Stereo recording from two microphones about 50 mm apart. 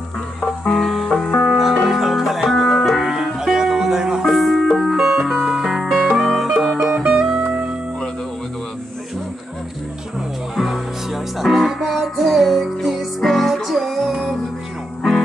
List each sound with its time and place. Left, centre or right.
0.4 s music: centre
1.2 s music: left
1.9 s music: centre
3.2 s music: centre
4.3 s music: centre
4.9 s music: centre
6.9 s music: centre
10.5 s music: centre